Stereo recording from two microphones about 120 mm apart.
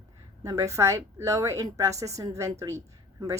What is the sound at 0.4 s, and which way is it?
A woman's voice, 25° right (ahead or behind).